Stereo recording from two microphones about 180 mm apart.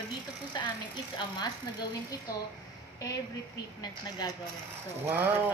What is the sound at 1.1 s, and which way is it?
Speech, 25° left (ahead or behind).